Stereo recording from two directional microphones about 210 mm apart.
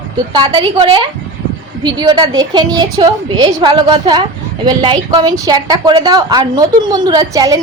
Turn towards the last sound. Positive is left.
turn(degrees=-15)  # may be behind; listen again after turning